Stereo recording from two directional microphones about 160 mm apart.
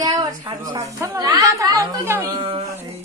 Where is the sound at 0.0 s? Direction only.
25° right (ahead or behind).